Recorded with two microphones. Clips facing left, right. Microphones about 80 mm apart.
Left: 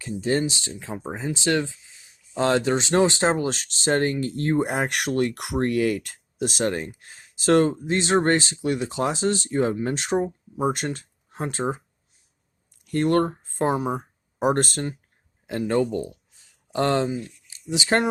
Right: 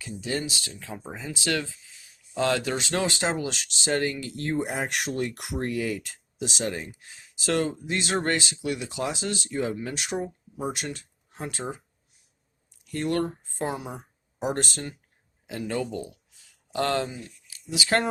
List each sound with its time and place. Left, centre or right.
0.2 s speech: left
12.8 s speech: left